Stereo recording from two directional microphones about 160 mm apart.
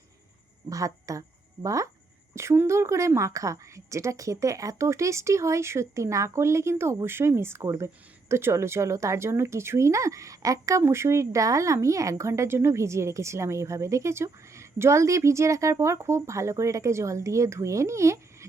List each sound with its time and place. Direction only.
0.7 s a woman's voice: 20° right (ahead or behind)